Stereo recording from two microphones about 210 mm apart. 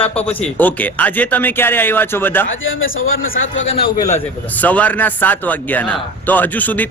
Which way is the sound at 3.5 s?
30° left (ahead or behind).